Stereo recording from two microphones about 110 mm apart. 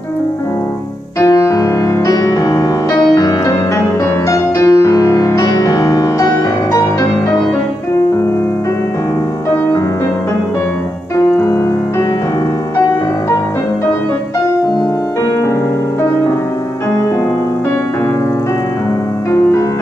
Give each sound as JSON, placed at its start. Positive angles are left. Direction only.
{"t": 1.2, "sound": "music", "side_deg": 30}
{"t": 11.3, "sound": "music", "side_deg": 30}